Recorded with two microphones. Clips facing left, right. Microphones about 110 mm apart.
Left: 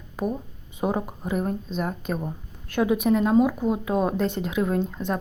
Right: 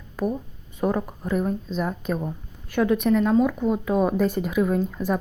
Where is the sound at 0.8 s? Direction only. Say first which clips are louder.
Right 2 dB; 20° left (ahead or behind).